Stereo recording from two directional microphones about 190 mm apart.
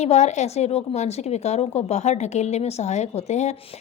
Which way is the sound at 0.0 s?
35° left (ahead or behind).